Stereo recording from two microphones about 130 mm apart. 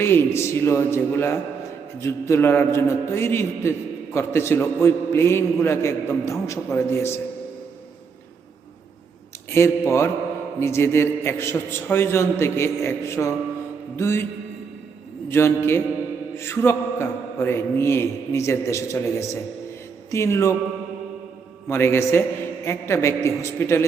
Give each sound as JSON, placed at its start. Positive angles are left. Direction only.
{"t": 0.0, "sound": "a man's voice", "side_deg": 20}
{"t": 9.5, "sound": "a man's voice", "side_deg": 20}
{"t": 15.3, "sound": "a man's voice", "side_deg": 20}
{"t": 21.7, "sound": "a man's voice", "side_deg": 20}